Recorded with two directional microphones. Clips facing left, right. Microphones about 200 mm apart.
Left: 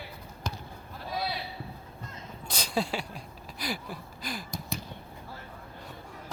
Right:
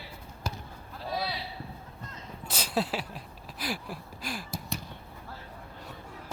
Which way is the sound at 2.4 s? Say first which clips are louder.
Even; 5° right (ahead or behind).